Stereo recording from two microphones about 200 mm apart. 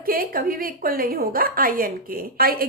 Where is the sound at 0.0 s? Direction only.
45° right (ahead or behind).